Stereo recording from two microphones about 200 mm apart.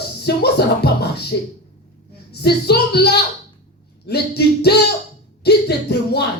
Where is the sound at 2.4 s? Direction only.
55° left (ahead or behind).